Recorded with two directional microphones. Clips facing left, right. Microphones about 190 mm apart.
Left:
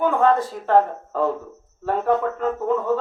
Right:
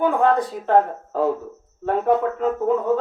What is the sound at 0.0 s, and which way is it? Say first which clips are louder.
Speech: even; 15° right (ahead or behind).